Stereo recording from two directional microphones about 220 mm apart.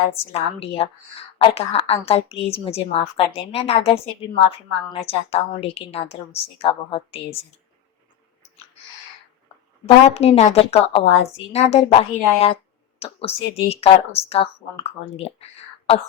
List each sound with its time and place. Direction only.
0.3 s a woman's voice: 25° left (ahead or behind)
9.8 s a woman's voice: 30° left (ahead or behind)